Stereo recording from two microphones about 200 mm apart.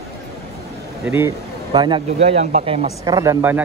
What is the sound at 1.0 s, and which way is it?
Speech, 10° right (ahead or behind).